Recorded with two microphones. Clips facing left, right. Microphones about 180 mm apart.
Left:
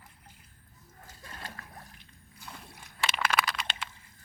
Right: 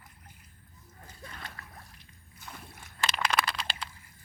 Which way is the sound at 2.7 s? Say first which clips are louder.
Even; 15° left (ahead or behind).